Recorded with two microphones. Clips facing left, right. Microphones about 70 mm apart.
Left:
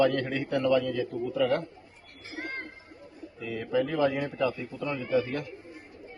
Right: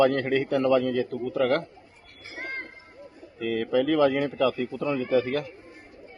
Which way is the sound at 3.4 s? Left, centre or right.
Right.